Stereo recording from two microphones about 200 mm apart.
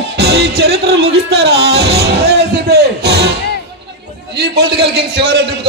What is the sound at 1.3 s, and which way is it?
Music, 55° right (ahead or behind).